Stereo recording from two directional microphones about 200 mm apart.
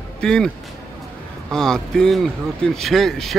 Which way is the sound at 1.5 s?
5° left (ahead or behind).